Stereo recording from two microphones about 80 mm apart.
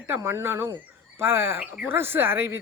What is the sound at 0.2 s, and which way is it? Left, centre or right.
Speech, right.